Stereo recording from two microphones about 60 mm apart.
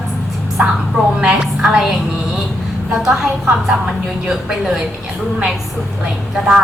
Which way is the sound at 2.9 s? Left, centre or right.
Centre.